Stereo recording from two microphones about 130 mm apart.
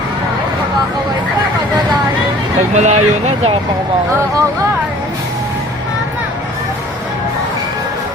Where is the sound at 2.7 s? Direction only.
60° right (ahead or behind).